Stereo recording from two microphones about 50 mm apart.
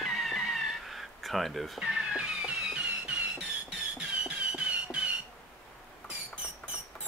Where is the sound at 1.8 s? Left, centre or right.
Right.